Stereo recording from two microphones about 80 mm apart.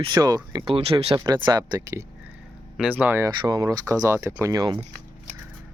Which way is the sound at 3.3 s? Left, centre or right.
Right.